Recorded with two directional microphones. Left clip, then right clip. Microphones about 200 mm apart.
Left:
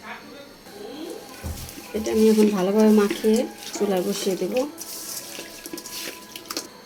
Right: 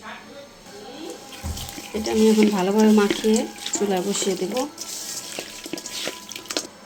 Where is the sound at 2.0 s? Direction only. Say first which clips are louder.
Even; 5° right (ahead or behind).